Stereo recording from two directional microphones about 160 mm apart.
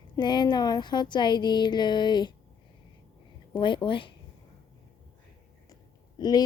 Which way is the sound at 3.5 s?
30° left (ahead or behind).